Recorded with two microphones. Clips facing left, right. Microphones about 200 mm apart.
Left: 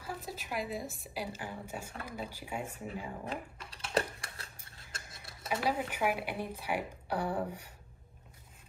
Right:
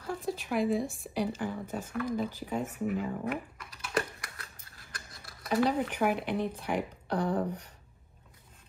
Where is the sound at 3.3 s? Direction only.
30° left (ahead or behind).